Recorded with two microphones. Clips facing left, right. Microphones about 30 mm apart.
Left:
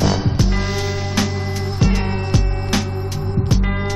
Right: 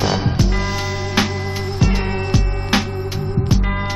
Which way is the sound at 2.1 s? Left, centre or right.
Centre.